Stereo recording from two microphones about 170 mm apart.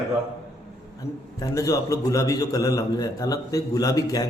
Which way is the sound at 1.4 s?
20° left (ahead or behind).